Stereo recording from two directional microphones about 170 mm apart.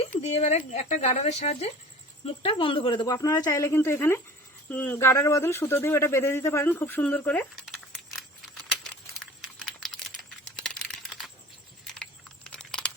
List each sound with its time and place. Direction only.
0.2 s speech: 40° left (ahead or behind); by 7.4 s 10° left (ahead or behind)
9.1 s computer keyboard: 5° left (ahead or behind)
10.6 s typing: 5° left (ahead or behind)
12.5 s a sound: 5° left (ahead or behind)